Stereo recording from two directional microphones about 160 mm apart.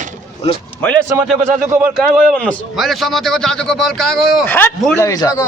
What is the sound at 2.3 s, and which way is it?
Speech, 5° left (ahead or behind).